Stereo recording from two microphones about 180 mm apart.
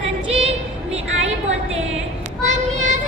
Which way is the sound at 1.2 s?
35° right (ahead or behind).